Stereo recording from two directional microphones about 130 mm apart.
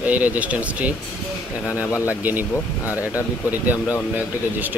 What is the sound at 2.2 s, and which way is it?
Speech, 15° right (ahead or behind).